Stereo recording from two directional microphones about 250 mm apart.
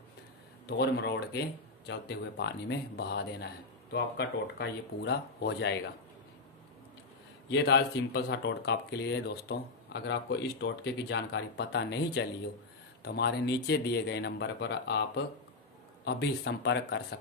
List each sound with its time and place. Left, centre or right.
0.7 s speech: left
7.4 s speech: left